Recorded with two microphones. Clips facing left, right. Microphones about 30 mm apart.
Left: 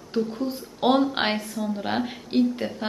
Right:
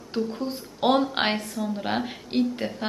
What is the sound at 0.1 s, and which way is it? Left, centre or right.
Speech, centre.